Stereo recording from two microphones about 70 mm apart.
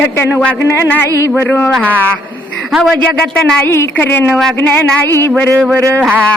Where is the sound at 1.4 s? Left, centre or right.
Left.